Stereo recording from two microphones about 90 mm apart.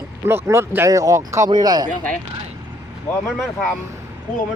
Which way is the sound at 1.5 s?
50° right (ahead or behind).